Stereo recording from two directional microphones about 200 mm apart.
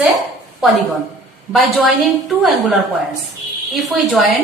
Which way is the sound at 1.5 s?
Centre (ahead or behind).